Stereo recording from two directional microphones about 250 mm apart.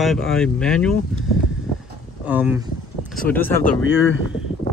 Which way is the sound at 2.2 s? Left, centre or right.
Centre.